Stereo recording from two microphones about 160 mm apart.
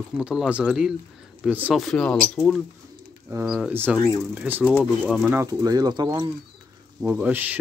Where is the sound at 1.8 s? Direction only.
5° left (ahead or behind).